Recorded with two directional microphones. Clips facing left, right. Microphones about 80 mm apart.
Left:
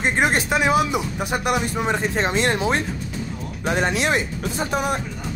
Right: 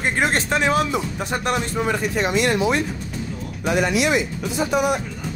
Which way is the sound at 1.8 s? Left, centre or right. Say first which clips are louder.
Even; left.